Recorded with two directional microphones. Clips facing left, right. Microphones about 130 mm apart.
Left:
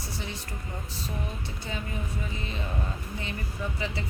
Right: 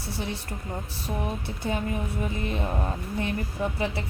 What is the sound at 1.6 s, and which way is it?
Speech, 55° right (ahead or behind).